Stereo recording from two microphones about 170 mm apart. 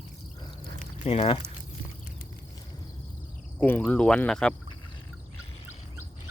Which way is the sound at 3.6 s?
10° left (ahead or behind).